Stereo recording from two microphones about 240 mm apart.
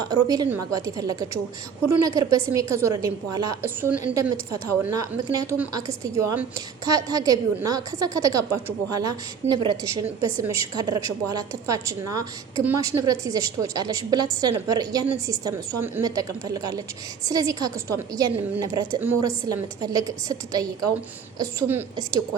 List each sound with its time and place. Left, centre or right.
0.3 s a woman's voice: centre